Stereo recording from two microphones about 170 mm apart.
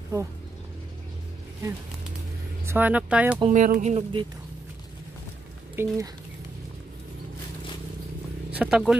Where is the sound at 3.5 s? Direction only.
50° right (ahead or behind).